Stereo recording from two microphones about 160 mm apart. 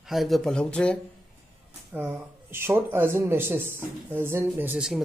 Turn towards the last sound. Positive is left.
turn(degrees=-5)  # may be behind; listen again after turning